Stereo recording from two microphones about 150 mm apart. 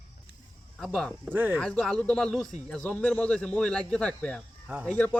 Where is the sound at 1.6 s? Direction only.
5° left (ahead or behind).